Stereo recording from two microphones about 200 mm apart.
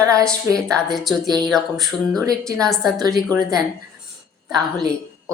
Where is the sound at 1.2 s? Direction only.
20° right (ahead or behind).